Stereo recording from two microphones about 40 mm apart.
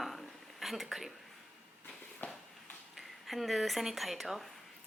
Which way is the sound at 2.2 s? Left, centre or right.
Left.